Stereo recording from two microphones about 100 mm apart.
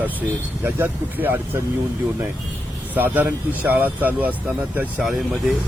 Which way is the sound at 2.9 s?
20° right (ahead or behind).